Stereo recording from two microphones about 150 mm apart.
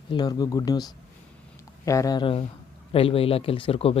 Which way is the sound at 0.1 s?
25° left (ahead or behind).